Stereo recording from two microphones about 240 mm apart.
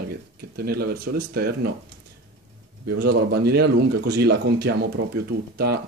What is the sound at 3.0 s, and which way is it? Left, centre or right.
Speech, right.